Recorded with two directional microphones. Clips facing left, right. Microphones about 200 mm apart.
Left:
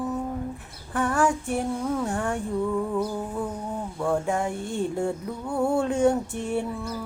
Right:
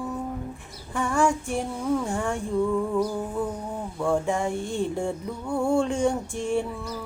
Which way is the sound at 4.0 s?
Centre (ahead or behind).